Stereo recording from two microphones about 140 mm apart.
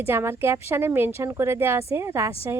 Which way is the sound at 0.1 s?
15° right (ahead or behind).